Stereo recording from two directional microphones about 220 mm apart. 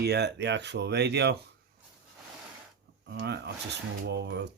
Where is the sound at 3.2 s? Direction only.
50° right (ahead or behind).